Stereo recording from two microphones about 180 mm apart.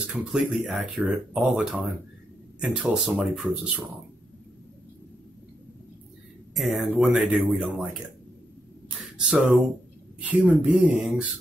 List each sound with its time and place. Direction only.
0.0 s speech: 5° right (ahead or behind)
6.5 s speech: centre (ahead or behind)
9.2 s speech: 5° right (ahead or behind)